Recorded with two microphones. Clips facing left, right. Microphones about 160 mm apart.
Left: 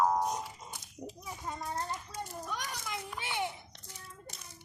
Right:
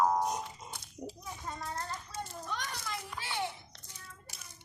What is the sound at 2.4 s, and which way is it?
Children playing, 10° left (ahead or behind).